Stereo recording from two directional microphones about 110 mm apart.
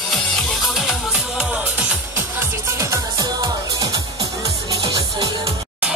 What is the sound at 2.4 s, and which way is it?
Music, 25° right (ahead or behind).